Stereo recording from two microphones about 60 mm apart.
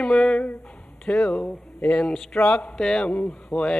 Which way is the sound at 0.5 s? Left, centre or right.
Left.